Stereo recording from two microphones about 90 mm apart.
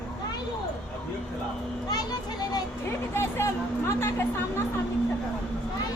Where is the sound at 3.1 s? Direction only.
30° left (ahead or behind).